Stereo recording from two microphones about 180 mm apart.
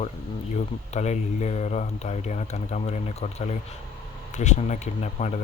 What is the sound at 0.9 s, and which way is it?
Speech, 40° left (ahead or behind).